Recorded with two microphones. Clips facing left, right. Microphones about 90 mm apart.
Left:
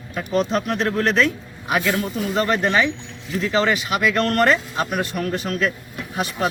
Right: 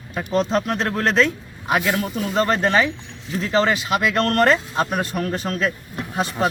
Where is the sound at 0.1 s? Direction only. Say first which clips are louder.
Right 1 dB; 30° right (ahead or behind).